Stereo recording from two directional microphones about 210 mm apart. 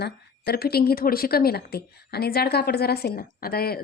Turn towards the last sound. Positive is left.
turn(degrees=45)  # may be behind; listen again after turning